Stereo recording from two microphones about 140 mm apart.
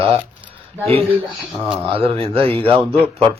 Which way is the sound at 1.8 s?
40° right (ahead or behind).